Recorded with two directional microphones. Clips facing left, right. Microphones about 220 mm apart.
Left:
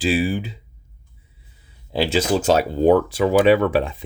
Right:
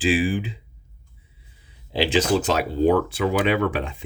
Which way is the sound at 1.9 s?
45° left (ahead or behind).